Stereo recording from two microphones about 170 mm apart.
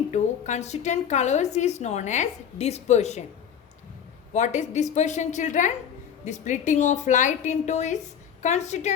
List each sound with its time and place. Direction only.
0.1 s a woman's voice: 45° left (ahead or behind)
4.3 s a woman's voice: 45° left (ahead or behind)